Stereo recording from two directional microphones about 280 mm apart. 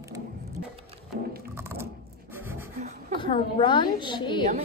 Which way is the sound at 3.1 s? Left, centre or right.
Centre.